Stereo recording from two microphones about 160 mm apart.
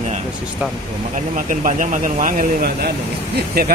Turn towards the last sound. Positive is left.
turn(degrees=-75)  # may be behind; listen again after turning